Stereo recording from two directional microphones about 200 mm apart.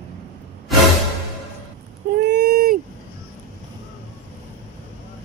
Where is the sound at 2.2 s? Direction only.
55° right (ahead or behind).